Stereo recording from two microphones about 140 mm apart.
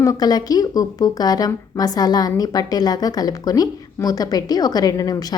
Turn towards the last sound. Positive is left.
turn(degrees=25)  # may be behind; listen again after turning